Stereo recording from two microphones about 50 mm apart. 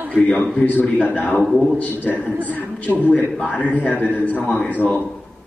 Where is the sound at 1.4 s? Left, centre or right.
Centre.